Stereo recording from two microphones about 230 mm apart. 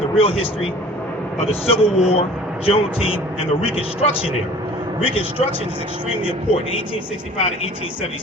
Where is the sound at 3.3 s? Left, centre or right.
Left.